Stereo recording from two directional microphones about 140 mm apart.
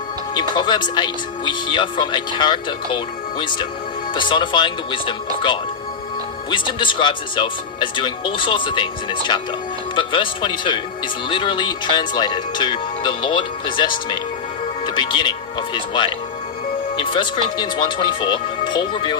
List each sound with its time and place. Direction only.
0.3 s speech: 35° left (ahead or behind)
6.5 s speech: 35° left (ahead or behind)